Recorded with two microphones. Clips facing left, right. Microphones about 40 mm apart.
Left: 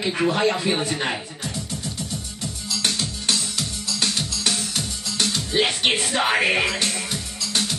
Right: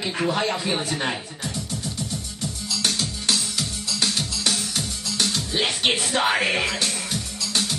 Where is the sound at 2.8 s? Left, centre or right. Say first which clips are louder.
Even; centre.